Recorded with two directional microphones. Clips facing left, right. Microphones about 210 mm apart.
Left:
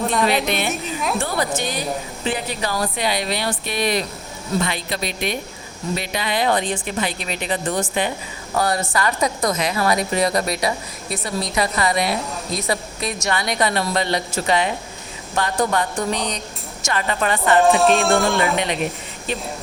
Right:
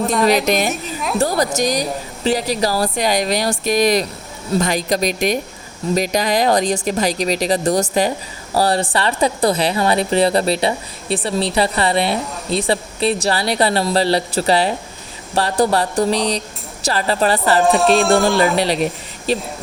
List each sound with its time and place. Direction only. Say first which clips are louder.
0.0 s speech: right 4 dB; centre (ahead or behind)
1.2 s a woman's voice: right 6 dB; 40° right (ahead or behind)
17.6 s speech: right 1 dB; centre (ahead or behind)
18.5 s speech: right 4 dB; 35° right (ahead or behind)